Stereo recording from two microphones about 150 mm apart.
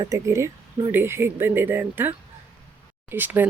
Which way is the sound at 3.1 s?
10° right (ahead or behind).